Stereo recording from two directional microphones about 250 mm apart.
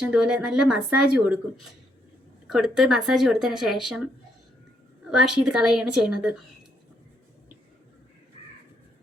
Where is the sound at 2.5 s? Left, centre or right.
Centre.